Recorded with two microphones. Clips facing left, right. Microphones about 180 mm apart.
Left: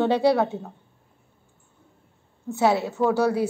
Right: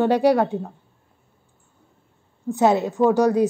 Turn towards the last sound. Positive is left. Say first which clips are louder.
# right 4 dB
turn(degrees=-15)  # may be behind; listen again after turning